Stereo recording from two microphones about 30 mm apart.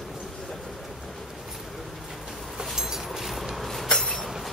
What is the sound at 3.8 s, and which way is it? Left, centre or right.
Train, left.